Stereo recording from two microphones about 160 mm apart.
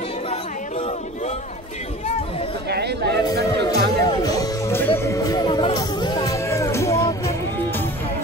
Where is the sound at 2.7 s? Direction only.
90° right.